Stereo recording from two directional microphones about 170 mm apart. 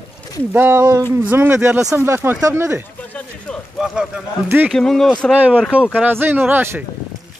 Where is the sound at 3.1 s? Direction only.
5° left (ahead or behind).